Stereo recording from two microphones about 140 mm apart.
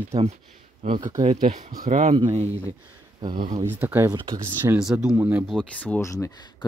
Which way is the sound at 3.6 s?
15° right (ahead or behind).